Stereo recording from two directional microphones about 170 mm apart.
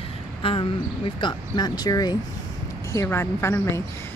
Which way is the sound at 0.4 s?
30° left (ahead or behind).